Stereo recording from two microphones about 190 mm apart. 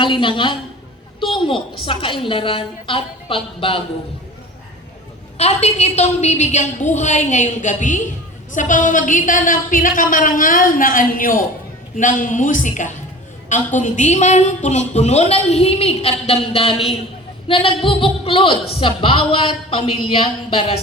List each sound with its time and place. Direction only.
0.0 s a woman's voice: 25° left (ahead or behind)
5.4 s a woman's voice: 35° left (ahead or behind)